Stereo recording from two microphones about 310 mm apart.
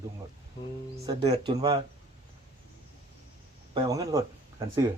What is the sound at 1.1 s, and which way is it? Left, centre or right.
Speech, centre.